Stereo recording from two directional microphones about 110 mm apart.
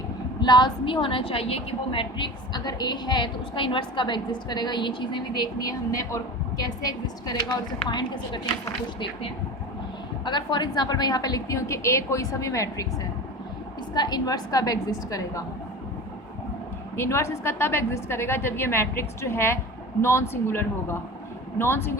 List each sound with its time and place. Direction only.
0.3 s a woman's voice: 40° left (ahead or behind)
10.2 s a woman's voice: 45° left (ahead or behind)
13.9 s a woman's voice: 40° left (ahead or behind)
17.0 s a woman's voice: 25° left (ahead or behind)